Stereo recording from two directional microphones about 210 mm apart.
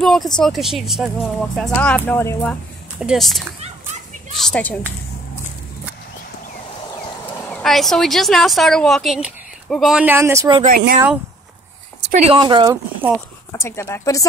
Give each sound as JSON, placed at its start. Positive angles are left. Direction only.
{"t": 0.0, "sound": "a sound", "side_deg": 0}
{"t": 0.4, "sound": "speech", "side_deg": 0}
{"t": 7.3, "sound": "speech", "side_deg": 5}
{"t": 12.1, "sound": "speech", "side_deg": -30}
{"t": 13.5, "sound": "speech", "side_deg": 15}